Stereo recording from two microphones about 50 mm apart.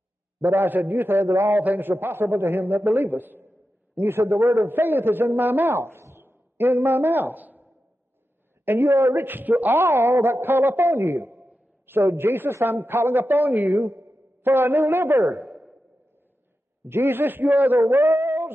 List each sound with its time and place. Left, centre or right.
0.4 s a man's voice: right
5.8 s a man's voice: right
8.6 s a man's voice: right
9.8 s a man's voice: right
11.3 s a sound: right
11.8 s a man's voice: right
13.7 s a woman's voice: right
14.4 s a man's voice: right
15.4 s a sound: centre
16.8 s a man's voice: right
17.7 s a sound: right